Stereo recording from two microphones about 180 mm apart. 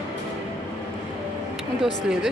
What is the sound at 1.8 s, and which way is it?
Speech, 5° right (ahead or behind).